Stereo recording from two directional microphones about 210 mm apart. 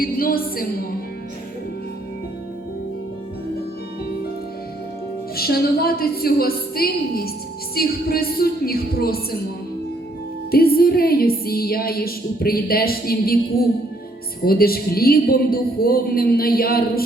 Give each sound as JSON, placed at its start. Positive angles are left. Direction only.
{"t": 0.0, "sound": "a woman's voice", "side_deg": 45}
{"t": 5.4, "sound": "a woman's voice", "side_deg": 45}
{"t": 10.5, "sound": "a woman's voice", "side_deg": 45}